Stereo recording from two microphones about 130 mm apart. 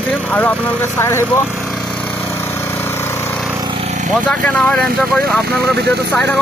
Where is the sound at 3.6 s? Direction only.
45° right (ahead or behind).